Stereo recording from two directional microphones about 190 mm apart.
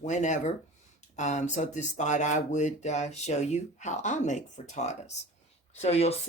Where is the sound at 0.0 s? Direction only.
40° left (ahead or behind).